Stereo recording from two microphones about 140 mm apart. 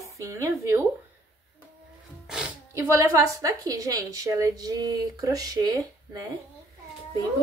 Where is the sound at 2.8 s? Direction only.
20° right (ahead or behind).